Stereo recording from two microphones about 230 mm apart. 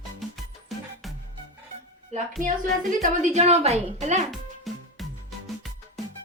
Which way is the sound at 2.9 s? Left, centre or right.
Right.